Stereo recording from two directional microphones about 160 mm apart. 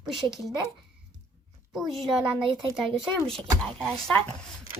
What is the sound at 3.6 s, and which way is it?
Speech, 5° left (ahead or behind).